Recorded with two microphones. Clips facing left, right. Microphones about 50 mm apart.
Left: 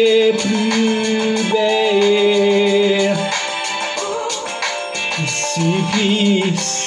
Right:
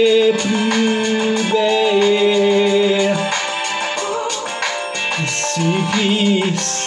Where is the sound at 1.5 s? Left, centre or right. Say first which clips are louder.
Even; centre.